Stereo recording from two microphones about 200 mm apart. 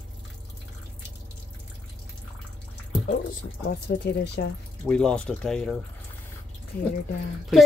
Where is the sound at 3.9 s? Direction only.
55° left (ahead or behind).